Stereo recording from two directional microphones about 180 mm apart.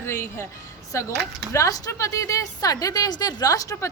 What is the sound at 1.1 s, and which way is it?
Speech, 70° right (ahead or behind).